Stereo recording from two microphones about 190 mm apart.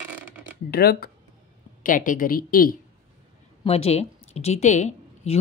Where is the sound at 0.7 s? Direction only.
55° left (ahead or behind).